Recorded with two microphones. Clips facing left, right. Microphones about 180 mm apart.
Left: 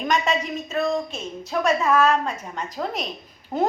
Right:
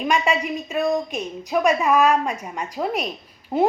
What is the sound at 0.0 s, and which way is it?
A woman's voice, 10° right (ahead or behind).